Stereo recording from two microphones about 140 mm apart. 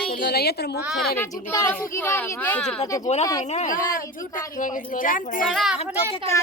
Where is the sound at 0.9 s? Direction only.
Centre (ahead or behind).